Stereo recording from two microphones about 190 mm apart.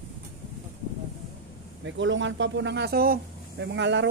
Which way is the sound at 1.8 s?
75° right (ahead or behind).